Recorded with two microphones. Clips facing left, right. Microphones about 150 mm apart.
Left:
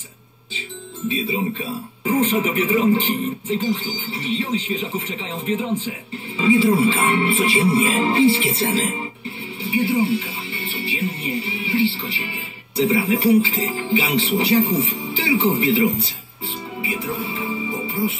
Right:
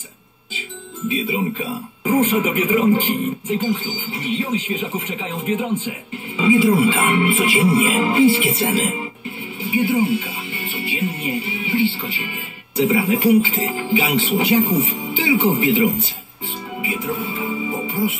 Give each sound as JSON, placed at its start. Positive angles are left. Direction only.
{"t": 1.0, "sound": "speech", "side_deg": 35}
{"t": 16.8, "sound": "music", "side_deg": 35}
{"t": 17.6, "sound": "music", "side_deg": -35}